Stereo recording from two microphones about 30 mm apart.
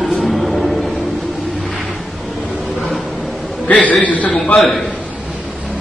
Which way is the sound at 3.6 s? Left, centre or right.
Left.